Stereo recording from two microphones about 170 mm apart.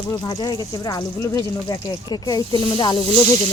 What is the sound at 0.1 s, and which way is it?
Speech, 25° left (ahead or behind).